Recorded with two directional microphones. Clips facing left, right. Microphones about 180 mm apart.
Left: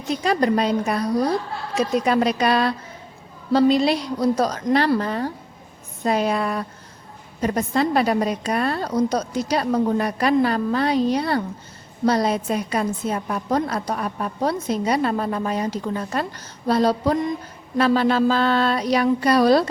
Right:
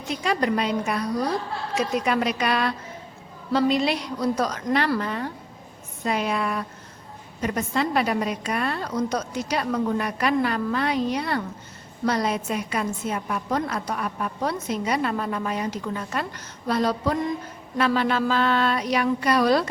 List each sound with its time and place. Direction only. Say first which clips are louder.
0.1 s a woman's voice: left 4 dB; 40° left (ahead or behind)